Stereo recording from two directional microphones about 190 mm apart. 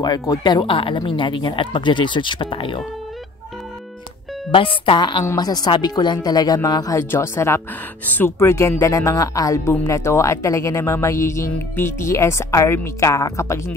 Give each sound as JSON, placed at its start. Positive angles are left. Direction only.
{"t": 0.0, "sound": "speech", "side_deg": 20}
{"t": 4.5, "sound": "speech", "side_deg": 30}